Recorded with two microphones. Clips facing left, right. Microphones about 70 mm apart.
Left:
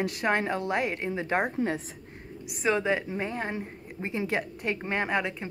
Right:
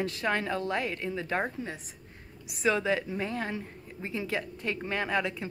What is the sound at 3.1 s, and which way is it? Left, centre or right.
Speech, left.